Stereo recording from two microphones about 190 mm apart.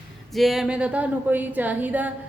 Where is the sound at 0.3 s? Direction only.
Centre (ahead or behind).